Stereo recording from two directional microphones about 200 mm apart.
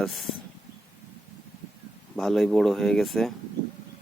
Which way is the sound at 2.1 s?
Centre (ahead or behind).